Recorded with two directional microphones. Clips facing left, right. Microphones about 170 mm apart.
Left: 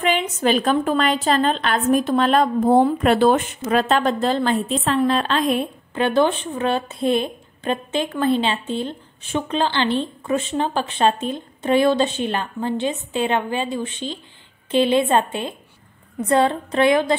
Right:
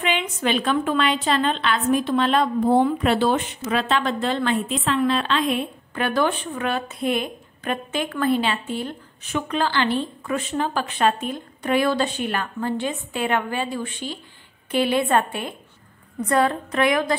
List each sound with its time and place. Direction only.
0.0 s a woman's voice: 40° left (ahead or behind)
5.9 s a woman's voice: 25° left (ahead or behind)